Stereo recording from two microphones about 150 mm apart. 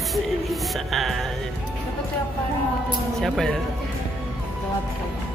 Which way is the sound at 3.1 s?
Centre (ahead or behind).